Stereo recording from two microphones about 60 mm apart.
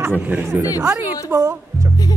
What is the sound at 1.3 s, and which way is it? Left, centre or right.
Speech, right.